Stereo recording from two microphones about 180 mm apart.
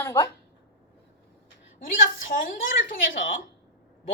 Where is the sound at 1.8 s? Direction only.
50° left (ahead or behind).